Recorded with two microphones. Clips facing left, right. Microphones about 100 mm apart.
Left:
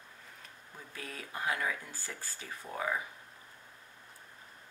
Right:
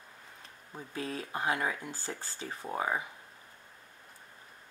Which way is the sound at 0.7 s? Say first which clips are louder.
Right 8 dB; 25° right (ahead or behind).